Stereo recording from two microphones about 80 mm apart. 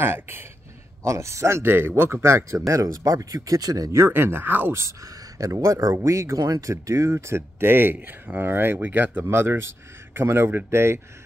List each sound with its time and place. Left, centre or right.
0.0 s speech: right
4.0 s speech: right
4.8 s speech: right